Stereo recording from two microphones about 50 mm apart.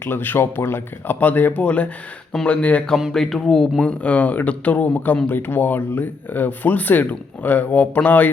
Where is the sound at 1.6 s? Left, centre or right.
Left.